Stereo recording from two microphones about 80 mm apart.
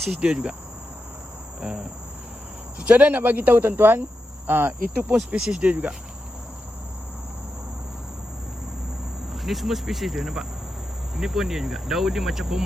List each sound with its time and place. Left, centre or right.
0.0 s speech: centre
1.6 s speech: centre
5.3 s speech: centre
9.3 s cricket: centre